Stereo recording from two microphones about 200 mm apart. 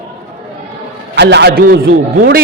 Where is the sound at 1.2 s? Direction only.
60° right (ahead or behind).